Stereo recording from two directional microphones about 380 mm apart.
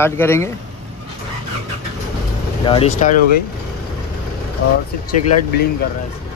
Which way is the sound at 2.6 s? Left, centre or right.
Centre.